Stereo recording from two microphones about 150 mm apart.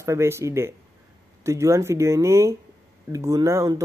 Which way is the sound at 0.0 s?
15° right (ahead or behind).